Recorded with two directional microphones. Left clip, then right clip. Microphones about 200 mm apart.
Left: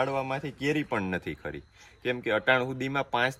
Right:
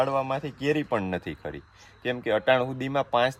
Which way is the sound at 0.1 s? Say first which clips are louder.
Right 4 dB; 50° right (ahead or behind).